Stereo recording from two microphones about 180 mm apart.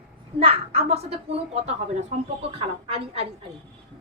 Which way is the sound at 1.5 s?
35° right (ahead or behind).